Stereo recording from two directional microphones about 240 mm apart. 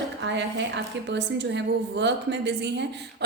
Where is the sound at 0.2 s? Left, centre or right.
Right.